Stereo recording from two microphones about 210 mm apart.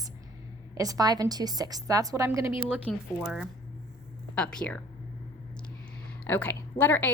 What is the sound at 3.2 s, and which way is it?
A woman's voice, centre (ahead or behind).